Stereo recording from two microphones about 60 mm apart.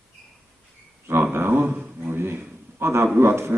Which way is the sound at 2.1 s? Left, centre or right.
Right.